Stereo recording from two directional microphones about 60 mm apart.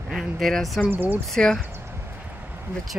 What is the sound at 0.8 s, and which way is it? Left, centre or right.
Speech, right.